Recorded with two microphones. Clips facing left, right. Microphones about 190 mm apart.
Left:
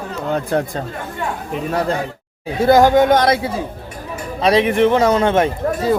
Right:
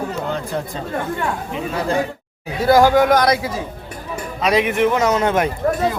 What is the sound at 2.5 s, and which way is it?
A man's voice, 20° left (ahead or behind).